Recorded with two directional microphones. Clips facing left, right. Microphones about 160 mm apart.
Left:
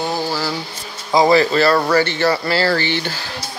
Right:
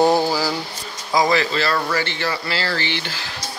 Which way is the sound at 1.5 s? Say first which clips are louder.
Left 7 dB; 45° left (ahead or behind).